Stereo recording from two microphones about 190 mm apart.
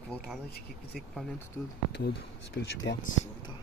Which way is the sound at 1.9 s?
65° left (ahead or behind).